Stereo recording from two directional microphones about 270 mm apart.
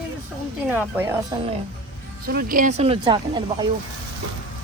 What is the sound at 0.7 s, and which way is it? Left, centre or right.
Speech, centre.